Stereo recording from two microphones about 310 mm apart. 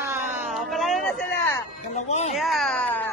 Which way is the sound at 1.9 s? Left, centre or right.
Left.